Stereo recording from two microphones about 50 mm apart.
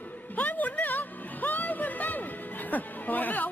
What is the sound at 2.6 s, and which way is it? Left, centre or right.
Speech, left.